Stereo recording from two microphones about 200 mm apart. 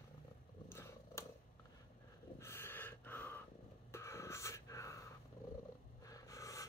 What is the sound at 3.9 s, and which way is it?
Wheeze, 15° left (ahead or behind).